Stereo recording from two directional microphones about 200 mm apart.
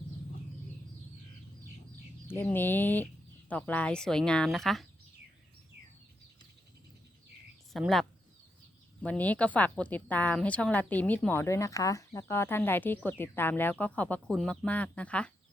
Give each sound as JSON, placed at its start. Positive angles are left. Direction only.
{"t": 2.2, "sound": "a woman's voice", "side_deg": 10}
{"t": 7.7, "sound": "speech", "side_deg": 0}
{"t": 9.0, "sound": "a woman's voice", "side_deg": 10}